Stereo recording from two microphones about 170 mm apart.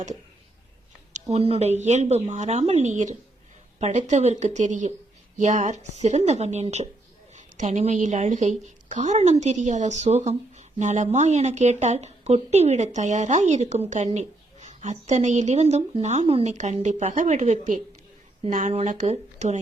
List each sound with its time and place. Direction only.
1.1 s a woman's voice: 40° right (ahead or behind)